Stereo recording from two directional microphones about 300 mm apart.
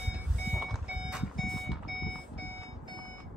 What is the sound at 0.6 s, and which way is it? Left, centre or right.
Alarm clock, centre.